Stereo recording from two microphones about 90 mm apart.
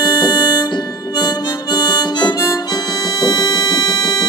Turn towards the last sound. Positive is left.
turn(degrees=50)  # may be behind; listen again after turning